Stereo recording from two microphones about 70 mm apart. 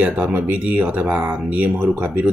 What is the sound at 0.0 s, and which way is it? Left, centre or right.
Speech, right.